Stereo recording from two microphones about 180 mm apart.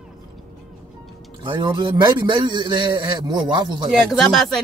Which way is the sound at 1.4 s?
25° right (ahead or behind).